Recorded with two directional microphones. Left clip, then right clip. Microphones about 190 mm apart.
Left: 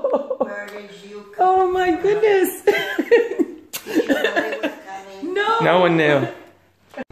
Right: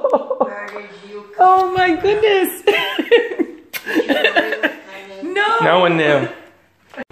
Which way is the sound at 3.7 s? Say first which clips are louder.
Right 4 dB; 15° left (ahead or behind).